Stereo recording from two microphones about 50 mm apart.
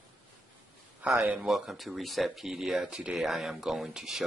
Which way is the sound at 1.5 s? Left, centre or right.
Centre.